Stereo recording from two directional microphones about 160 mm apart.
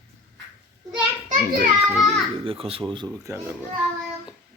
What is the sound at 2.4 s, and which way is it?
Speech, 35° right (ahead or behind).